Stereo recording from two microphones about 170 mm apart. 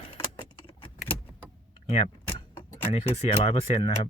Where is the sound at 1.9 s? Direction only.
35° left (ahead or behind).